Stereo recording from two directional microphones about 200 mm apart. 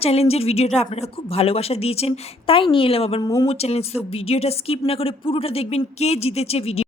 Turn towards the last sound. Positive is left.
turn(degrees=30)  # may be behind; listen again after turning